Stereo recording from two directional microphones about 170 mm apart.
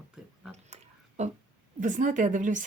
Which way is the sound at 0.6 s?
40° right (ahead or behind).